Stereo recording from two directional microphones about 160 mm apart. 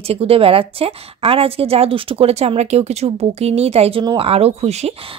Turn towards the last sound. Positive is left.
turn(degrees=-40)  # may be behind; listen again after turning